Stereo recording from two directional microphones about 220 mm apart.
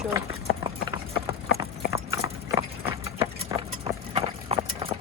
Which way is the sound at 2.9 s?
15° right (ahead or behind).